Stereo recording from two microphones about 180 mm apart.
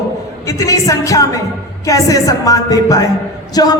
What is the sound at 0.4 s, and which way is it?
A man's voice, 20° left (ahead or behind).